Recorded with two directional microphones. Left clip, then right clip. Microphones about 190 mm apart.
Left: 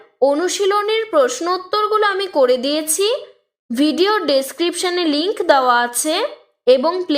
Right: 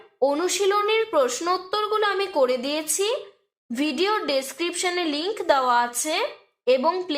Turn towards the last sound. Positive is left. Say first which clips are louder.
# left 7 dB
turn(degrees=25)  # may be behind; listen again after turning